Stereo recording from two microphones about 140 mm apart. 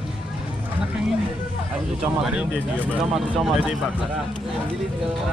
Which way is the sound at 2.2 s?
5° right (ahead or behind).